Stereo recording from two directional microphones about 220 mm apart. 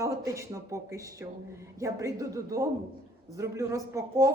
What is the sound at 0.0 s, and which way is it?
A woman's voice, 15° right (ahead or behind).